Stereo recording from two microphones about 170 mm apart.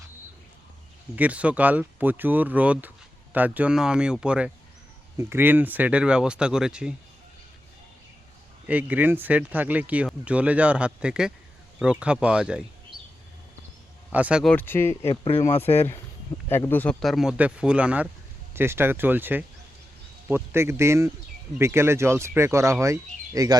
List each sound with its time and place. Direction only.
1.1 s speech: 10° right (ahead or behind)
8.6 s speech: 10° right (ahead or behind)
14.1 s speech: 10° right (ahead or behind)
14.5 s speech: 10° left (ahead or behind)
15.0 s speech: 30° left (ahead or behind)
16.5 s speech: 15° left (ahead or behind); by 23.6 s 20° right (ahead or behind)